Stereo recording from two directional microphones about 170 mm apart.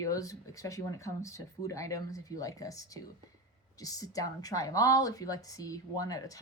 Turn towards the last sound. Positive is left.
turn(degrees=20)  # may be behind; listen again after turning